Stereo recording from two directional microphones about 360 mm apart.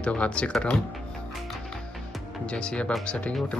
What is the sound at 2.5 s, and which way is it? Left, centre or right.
Speech, centre.